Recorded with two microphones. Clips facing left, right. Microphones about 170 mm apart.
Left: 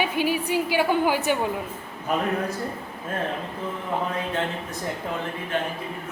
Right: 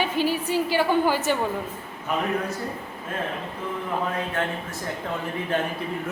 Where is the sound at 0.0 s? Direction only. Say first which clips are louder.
Even; 15° left (ahead or behind).